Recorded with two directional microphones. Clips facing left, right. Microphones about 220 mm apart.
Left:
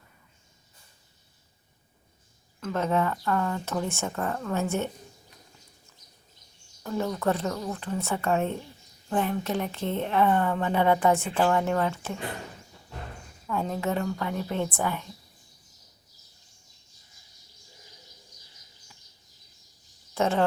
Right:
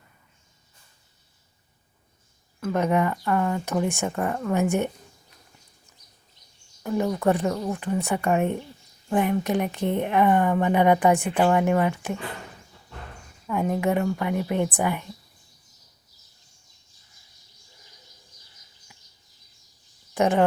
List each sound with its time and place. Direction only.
2.6 s a woman's voice: 10° right (ahead or behind)
6.8 s a woman's voice: 15° right (ahead or behind)
13.5 s a woman's voice: 15° right (ahead or behind)
20.1 s speech: 15° right (ahead or behind)